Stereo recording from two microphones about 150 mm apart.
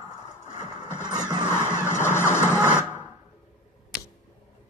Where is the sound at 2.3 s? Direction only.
15° left (ahead or behind).